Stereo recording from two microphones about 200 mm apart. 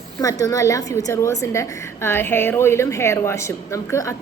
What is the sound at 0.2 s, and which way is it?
A woman's voice, 15° left (ahead or behind).